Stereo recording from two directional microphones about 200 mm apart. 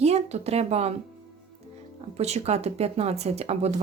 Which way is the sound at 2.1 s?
30° right (ahead or behind).